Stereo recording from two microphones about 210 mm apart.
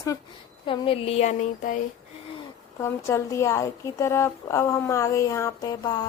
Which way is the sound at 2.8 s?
15° left (ahead or behind).